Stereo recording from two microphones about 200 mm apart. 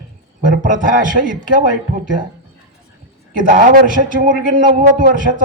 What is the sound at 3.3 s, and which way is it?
A man's voice, 40° right (ahead or behind).